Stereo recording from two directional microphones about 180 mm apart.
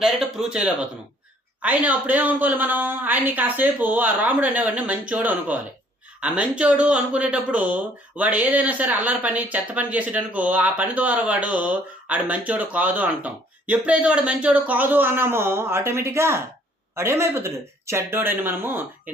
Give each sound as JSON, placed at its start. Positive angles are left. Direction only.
{"t": 0.0, "sound": "speech", "side_deg": -5}